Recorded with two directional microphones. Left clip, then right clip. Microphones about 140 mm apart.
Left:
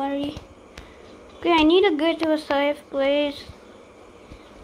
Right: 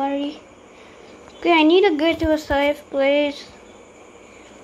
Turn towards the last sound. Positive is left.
turn(degrees=-10)  # may be behind; listen again after turning